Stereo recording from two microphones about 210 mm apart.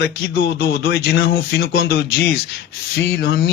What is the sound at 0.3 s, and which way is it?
Speech, 50° left (ahead or behind).